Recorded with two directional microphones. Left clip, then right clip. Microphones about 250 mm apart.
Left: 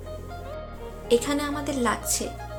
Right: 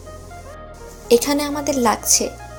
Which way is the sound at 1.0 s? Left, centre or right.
Centre.